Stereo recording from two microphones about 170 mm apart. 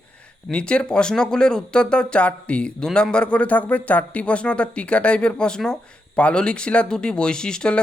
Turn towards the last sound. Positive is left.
turn(degrees=5)  # may be behind; listen again after turning